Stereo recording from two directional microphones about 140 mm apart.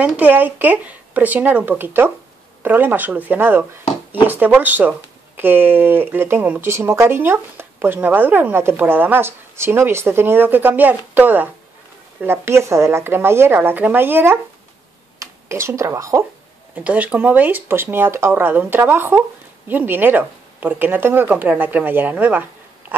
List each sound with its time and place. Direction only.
0.0 s speech: 10° right (ahead or behind)